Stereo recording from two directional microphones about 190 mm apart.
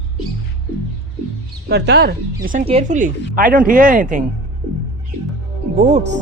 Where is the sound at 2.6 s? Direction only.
35° right (ahead or behind).